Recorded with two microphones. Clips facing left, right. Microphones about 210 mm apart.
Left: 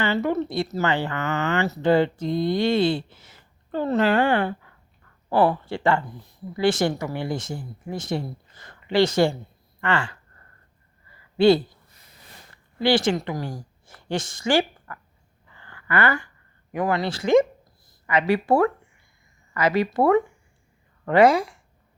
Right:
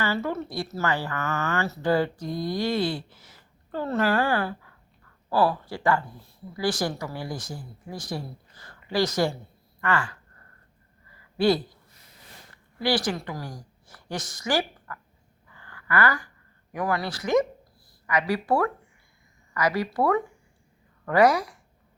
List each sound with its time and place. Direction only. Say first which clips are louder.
0.0 s speech: left 5 dB; 20° left (ahead or behind)
11.3 s speech: left 5 dB; 25° left (ahead or behind)
12.8 s speech: left 5 dB; 25° left (ahead or behind)
15.5 s a sound: left 2 dB; 25° left (ahead or behind)
16.7 s a woman's voice: left 4 dB; 25° left (ahead or behind)